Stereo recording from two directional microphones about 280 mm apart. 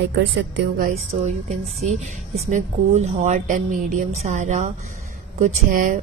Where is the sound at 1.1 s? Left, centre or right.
Right.